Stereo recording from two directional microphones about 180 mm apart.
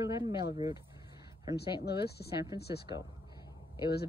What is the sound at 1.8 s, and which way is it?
Speech, 65° left (ahead or behind).